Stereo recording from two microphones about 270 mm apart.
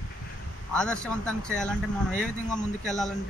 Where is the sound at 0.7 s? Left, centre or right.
Centre.